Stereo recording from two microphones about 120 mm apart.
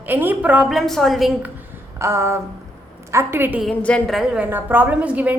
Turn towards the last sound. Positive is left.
turn(degrees=-10)  # may be behind; listen again after turning